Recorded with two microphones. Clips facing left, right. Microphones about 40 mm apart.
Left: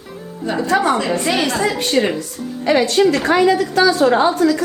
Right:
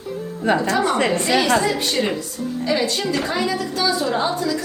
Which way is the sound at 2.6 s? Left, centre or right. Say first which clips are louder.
Left 8 dB; left.